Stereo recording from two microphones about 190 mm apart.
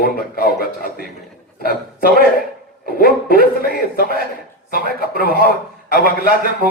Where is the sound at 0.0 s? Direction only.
50° left (ahead or behind).